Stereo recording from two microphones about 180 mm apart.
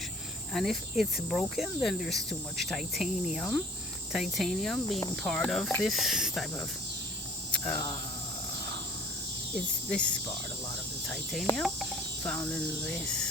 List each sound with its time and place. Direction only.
0.5 s speech: centre (ahead or behind)
7.6 s speech: 20° left (ahead or behind)
9.6 s speech: 5° left (ahead or behind)
11.4 s cricket: centre (ahead or behind)